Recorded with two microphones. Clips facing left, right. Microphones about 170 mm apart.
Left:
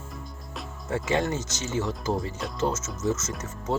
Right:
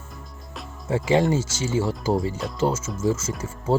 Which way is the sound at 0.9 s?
25° right (ahead or behind).